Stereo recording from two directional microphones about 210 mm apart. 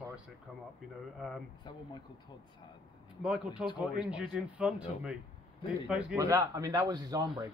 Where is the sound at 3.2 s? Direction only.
5° right (ahead or behind).